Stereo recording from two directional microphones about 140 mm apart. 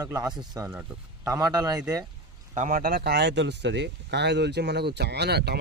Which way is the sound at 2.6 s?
75° right (ahead or behind).